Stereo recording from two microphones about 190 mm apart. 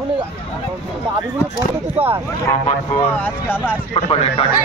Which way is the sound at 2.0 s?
30° right (ahead or behind).